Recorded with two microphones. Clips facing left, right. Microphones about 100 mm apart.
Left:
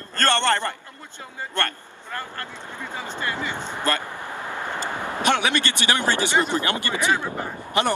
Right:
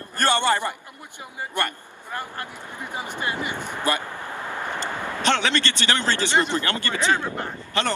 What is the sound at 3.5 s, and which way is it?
Speech, 20° left (ahead or behind).